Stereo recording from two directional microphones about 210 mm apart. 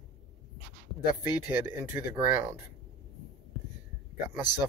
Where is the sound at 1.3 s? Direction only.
10° right (ahead or behind).